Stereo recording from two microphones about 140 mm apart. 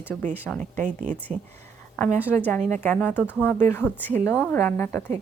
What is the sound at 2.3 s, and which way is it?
Speech, 15° left (ahead or behind).